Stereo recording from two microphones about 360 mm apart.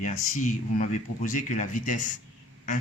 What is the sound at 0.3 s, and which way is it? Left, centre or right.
Speech, left.